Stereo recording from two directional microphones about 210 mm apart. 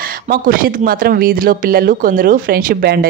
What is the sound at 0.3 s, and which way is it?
Speech, 40° right (ahead or behind).